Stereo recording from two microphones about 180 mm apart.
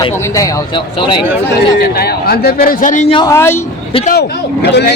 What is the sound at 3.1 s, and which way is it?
Speech, 20° left (ahead or behind).